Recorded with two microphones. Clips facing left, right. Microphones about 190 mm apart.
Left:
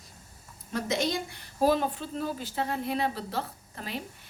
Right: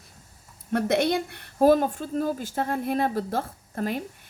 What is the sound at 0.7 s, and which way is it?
A woman's voice, 60° right (ahead or behind).